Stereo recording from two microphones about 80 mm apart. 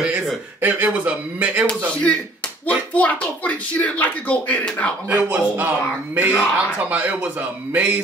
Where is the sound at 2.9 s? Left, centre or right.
Centre.